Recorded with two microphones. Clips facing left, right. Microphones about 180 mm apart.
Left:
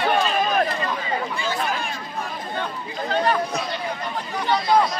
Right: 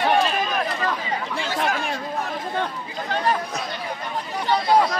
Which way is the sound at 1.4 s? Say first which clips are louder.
Right 1 dB; 90° right.